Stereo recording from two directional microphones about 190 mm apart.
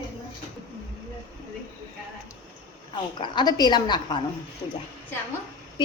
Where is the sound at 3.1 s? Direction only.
25° left (ahead or behind).